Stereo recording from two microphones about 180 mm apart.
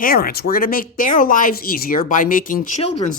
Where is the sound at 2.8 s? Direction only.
35° left (ahead or behind).